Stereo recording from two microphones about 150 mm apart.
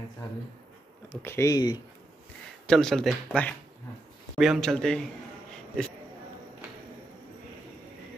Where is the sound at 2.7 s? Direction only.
5° left (ahead or behind).